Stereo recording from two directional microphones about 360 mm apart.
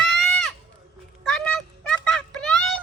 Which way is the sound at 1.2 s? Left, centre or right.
Centre.